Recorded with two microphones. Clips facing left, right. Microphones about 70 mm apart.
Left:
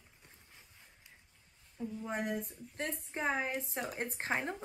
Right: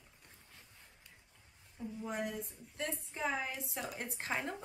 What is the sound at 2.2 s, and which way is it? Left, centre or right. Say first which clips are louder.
A woman's voice: left 4 dB; left.